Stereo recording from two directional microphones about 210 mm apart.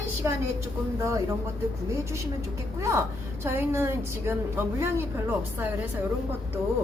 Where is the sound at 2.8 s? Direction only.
15° right (ahead or behind).